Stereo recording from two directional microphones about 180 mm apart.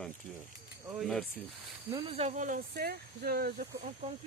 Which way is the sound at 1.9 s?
25° right (ahead or behind).